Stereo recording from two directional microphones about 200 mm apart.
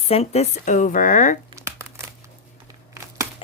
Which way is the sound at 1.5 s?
15° right (ahead or behind).